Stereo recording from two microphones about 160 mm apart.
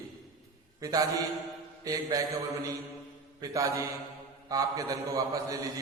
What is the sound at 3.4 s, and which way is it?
Mantra, 20° right (ahead or behind).